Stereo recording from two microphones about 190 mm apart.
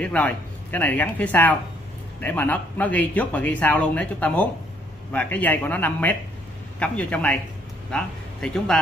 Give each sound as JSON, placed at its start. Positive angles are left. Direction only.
{"t": 0.0, "sound": "speech", "side_deg": 10}